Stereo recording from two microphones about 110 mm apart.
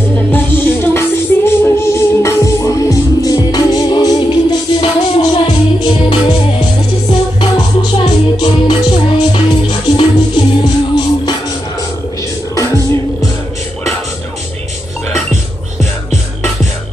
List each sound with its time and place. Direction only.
0.3 s music: 20° left (ahead or behind); by 4.8 s 40° left (ahead or behind)
5.9 s music: 50° left (ahead or behind)
12.5 s music: 30° left (ahead or behind)
15.8 s music: centre (ahead or behind)